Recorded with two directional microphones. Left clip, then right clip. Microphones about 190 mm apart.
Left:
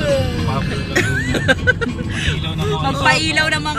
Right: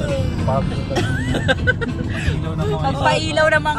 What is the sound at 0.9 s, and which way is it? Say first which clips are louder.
Music: left 5 dB; 30° left (ahead or behind).